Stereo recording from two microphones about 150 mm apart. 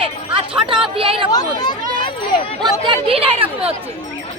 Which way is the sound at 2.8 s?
35° right (ahead or behind).